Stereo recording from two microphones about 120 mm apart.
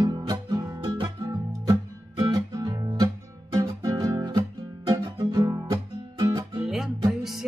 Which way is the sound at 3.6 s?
35° right (ahead or behind).